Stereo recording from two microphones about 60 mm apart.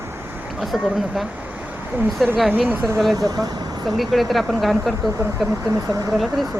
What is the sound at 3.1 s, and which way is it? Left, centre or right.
Speech, right.